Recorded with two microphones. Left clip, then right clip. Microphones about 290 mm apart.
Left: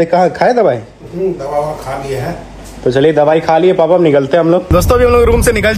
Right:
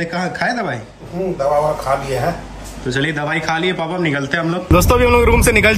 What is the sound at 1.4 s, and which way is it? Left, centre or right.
Speech, centre.